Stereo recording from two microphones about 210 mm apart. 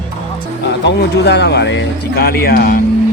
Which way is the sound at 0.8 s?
55° left (ahead or behind).